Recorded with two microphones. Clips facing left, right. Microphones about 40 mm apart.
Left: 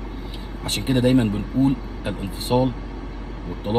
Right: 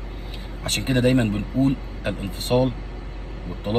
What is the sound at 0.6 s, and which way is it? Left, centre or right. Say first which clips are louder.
Speech: left 1 dB; right.